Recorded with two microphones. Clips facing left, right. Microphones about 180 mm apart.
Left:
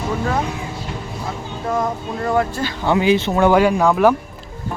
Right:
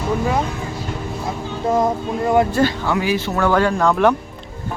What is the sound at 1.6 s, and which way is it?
Speech, 20° right (ahead or behind).